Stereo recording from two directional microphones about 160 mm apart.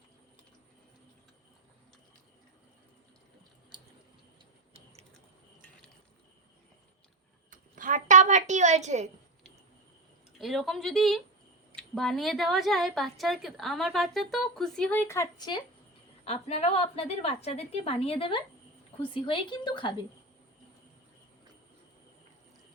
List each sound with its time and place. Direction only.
7.5 s a sound: 55° right (ahead or behind)
10.3 s speech: centre (ahead or behind); by 15.6 s 25° left (ahead or behind)
16.2 s a woman's voice: 40° left (ahead or behind)